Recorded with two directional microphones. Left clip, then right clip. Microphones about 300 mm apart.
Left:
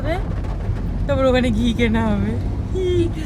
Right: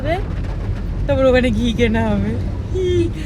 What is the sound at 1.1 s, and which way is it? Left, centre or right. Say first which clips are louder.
A man's voice: right 3 dB; right.